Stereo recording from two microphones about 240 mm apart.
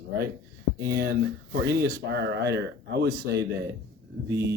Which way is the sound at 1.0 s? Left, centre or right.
Right.